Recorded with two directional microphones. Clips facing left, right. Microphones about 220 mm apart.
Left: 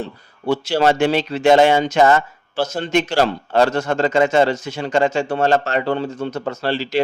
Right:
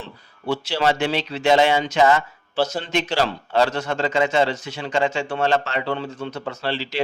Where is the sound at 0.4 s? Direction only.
45° left (ahead or behind).